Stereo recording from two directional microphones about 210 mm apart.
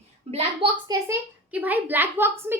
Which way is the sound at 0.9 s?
10° right (ahead or behind).